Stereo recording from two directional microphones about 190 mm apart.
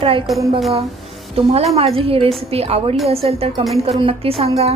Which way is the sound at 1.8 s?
30° right (ahead or behind).